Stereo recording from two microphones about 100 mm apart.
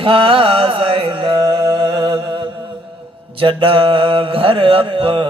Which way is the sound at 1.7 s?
50° right (ahead or behind).